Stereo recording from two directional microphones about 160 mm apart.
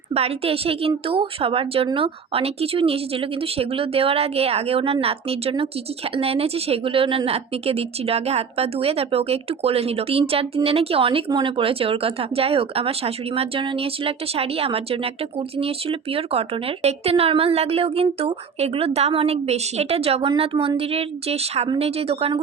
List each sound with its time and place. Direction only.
0.1 s speech: 40° right (ahead or behind)